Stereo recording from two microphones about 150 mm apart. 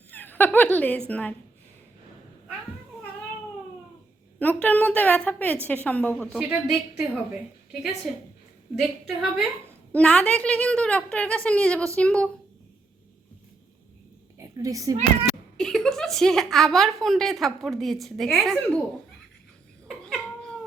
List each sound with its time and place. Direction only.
0.1 s speech: 10° left (ahead or behind)
4.4 s a woman's voice: 10° left (ahead or behind)
6.4 s a woman's voice: 10° right (ahead or behind)
8.8 s a woman's voice: centre (ahead or behind)
14.3 s a sound: 20° right (ahead or behind)
15.5 s a woman's voice: 5° left (ahead or behind)
19.9 s cat: 5° left (ahead or behind)